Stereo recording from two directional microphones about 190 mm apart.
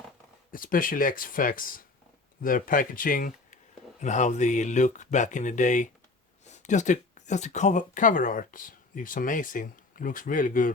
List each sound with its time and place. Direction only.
0.5 s speech: 45° left (ahead or behind)